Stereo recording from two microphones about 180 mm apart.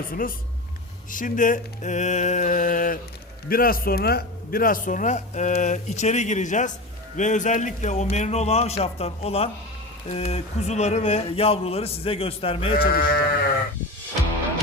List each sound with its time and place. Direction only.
0.1 s a man's voice: 50° left (ahead or behind); by 12.7 s 30° left (ahead or behind)
12.7 s speech: 55° left (ahead or behind)